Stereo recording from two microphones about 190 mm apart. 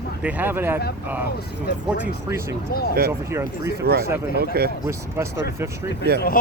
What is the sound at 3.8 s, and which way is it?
Speech, 55° right (ahead or behind).